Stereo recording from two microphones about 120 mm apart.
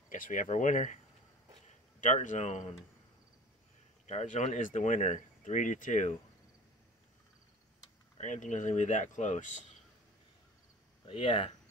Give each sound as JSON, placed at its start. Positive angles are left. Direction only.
{"t": 0.1, "sound": "speech", "side_deg": 90}
{"t": 2.0, "sound": "a man's voice", "side_deg": 90}
{"t": 4.0, "sound": "speech", "side_deg": 70}
{"t": 8.2, "sound": "speech", "side_deg": 85}
{"t": 11.1, "sound": "speech", "side_deg": 50}